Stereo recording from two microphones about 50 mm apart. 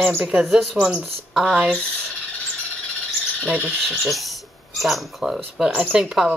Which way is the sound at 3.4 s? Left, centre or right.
Right.